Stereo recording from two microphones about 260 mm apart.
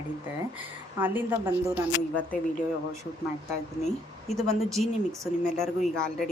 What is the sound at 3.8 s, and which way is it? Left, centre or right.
Speech, centre.